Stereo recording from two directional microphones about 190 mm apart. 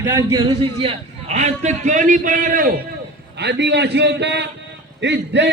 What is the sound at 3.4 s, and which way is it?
A man's voice, 65° right (ahead or behind).